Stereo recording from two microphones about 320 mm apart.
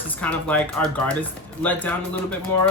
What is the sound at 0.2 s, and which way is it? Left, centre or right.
Speech, centre.